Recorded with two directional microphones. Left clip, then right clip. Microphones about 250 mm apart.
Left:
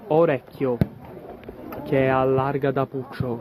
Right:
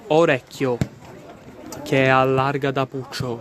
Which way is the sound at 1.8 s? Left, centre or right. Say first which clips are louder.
Right 4 dB; right.